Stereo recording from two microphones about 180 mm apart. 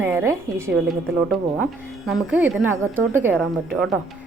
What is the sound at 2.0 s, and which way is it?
Speech, 5° right (ahead or behind).